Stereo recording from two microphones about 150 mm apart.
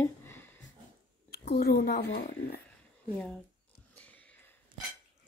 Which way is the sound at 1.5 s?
90° left.